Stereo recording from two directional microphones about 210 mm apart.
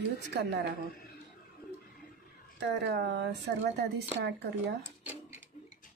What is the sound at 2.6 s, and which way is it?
A woman's voice, 55° right (ahead or behind).